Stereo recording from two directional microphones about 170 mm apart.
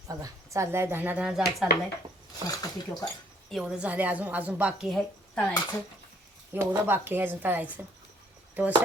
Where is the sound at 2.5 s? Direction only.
20° left (ahead or behind).